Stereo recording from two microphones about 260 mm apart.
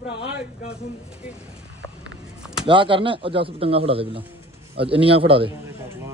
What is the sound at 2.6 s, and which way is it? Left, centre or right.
A man's voice, centre.